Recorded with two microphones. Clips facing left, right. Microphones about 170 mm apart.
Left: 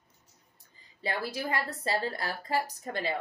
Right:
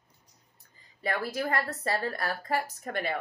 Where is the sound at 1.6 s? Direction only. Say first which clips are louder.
Even; 20° left (ahead or behind).